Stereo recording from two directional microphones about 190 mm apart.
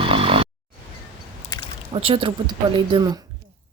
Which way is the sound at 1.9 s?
30° right (ahead or behind).